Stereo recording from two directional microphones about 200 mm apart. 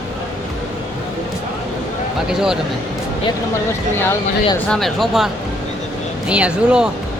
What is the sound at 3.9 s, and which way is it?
Speech, 10° left (ahead or behind).